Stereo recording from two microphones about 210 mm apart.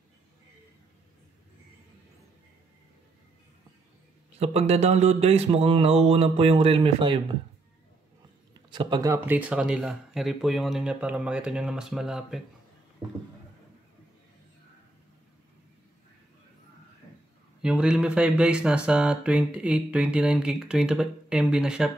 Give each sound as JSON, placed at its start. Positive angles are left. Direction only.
{"t": 4.4, "sound": "speech", "side_deg": -30}
{"t": 8.7, "sound": "speech", "side_deg": -20}
{"t": 13.0, "sound": "speech", "side_deg": -20}
{"t": 17.6, "sound": "speech", "side_deg": -5}